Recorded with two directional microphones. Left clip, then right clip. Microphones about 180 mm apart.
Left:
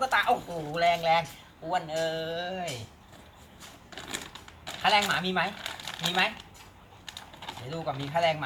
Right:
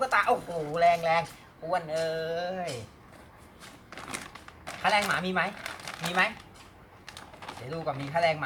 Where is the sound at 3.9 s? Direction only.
20° right (ahead or behind).